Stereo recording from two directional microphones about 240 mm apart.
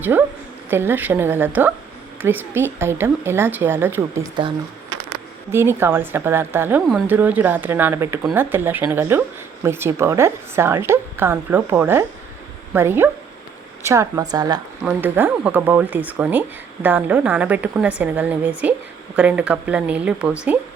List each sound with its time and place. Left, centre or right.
0.0 s a woman's voice: centre